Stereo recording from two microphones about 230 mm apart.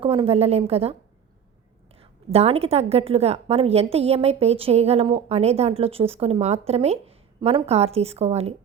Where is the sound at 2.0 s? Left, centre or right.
Right.